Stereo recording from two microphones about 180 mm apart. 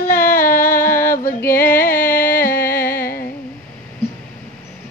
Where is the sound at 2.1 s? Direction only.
50° left (ahead or behind).